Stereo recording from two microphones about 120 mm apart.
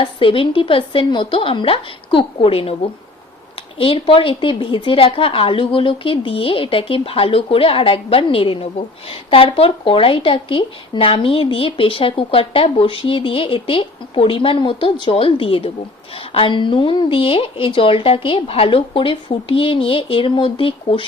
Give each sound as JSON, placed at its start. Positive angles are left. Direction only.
{"t": 0.0, "sound": "a woman's voice", "side_deg": 45}